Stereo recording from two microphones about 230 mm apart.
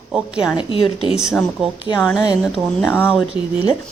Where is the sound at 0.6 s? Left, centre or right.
Left.